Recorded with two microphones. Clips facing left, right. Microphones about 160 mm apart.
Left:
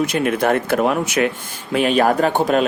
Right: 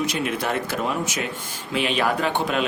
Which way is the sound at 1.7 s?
45° left (ahead or behind).